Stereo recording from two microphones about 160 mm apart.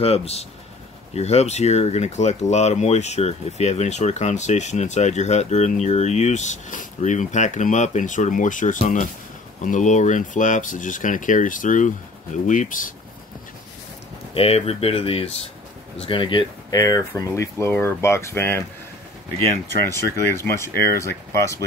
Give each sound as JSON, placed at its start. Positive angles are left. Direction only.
{"t": 0.0, "sound": "speech", "side_deg": 40}
{"t": 14.3, "sound": "speech", "side_deg": 40}
{"t": 20.2, "sound": "speech", "side_deg": 15}